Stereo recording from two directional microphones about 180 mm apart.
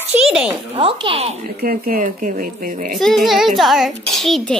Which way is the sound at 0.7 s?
30° right (ahead or behind).